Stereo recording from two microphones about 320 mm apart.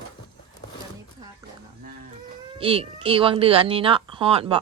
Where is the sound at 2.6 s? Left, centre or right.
Centre.